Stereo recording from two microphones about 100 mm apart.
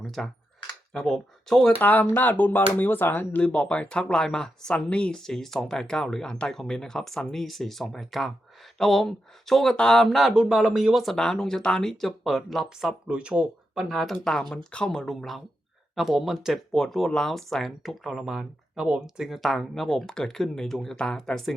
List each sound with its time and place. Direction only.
0.0 s a sound: centre (ahead or behind)
0.7 s speech: 5° left (ahead or behind)
1.8 s speech: 15° left (ahead or behind)